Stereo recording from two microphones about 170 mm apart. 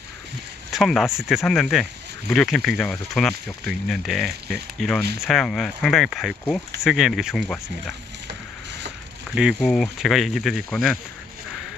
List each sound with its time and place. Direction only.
0.7 s speech: centre (ahead or behind)
8.3 s a sound: 85° right
9.3 s speech: 5° right (ahead or behind)